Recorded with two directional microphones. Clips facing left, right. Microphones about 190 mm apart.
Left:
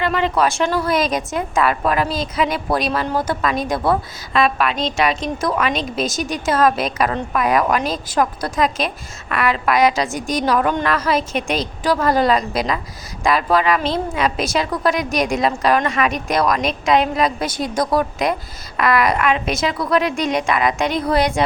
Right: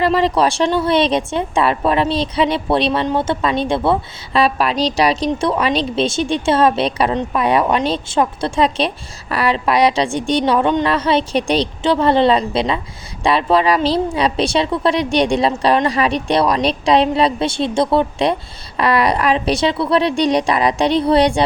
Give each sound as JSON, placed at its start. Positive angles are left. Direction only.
{"t": 0.0, "sound": "a woman's voice", "side_deg": -35}